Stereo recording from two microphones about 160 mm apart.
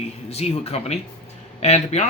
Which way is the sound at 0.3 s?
40° left (ahead or behind).